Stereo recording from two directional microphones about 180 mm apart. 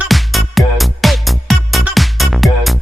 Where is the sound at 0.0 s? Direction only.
Centre (ahead or behind).